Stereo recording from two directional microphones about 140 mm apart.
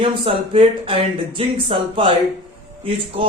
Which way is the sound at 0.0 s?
40° right (ahead or behind).